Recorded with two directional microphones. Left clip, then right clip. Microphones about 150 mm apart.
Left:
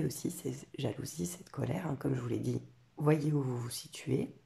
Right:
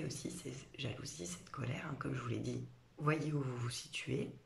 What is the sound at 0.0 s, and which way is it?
Speech, 45° left (ahead or behind).